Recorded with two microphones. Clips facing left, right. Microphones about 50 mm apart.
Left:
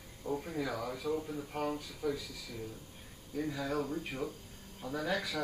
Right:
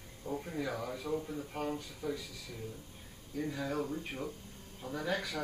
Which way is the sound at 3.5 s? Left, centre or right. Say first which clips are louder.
Left 1 dB; left.